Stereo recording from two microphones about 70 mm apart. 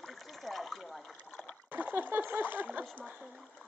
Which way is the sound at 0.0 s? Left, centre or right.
Centre.